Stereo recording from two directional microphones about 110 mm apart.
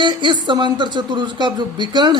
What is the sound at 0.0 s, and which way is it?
Speech, 45° right (ahead or behind).